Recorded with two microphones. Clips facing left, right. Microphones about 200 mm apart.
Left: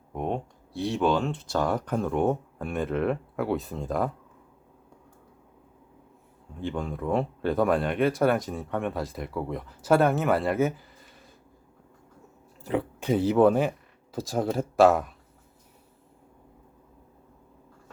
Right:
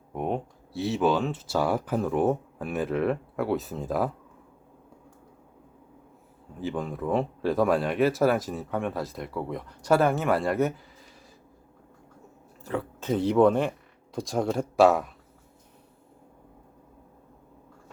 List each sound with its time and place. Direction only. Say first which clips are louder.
0.1 s speech: right 1 dB; 5° right (ahead or behind)
6.6 s speech: right 1 dB; 5° right (ahead or behind)
12.6 s speech: left 3 dB; 15° left (ahead or behind); by 15.1 s centre (ahead or behind)